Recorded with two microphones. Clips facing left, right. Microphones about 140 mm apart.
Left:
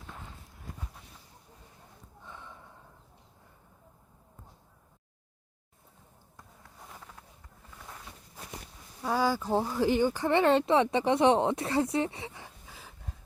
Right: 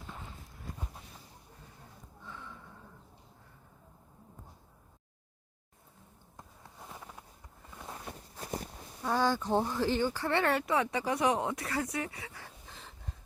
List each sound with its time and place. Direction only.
2.2 s gasp: 20° left (ahead or behind)
8.4 s walk: 35° right (ahead or behind)
9.0 s speech: 10° left (ahead or behind); by 12.5 s 25° left (ahead or behind)
12.6 s a sound: 5° left (ahead or behind)